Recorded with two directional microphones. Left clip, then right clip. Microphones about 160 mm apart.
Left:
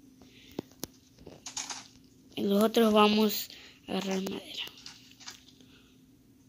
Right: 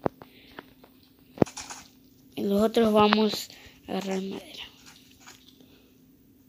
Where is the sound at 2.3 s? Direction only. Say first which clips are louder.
Right 2 dB; 5° right (ahead or behind).